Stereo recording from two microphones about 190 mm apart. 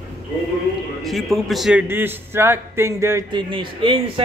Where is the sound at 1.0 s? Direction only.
Centre (ahead or behind).